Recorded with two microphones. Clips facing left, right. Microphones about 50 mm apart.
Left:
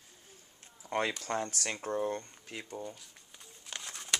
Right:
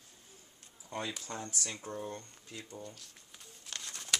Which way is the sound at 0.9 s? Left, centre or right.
Left.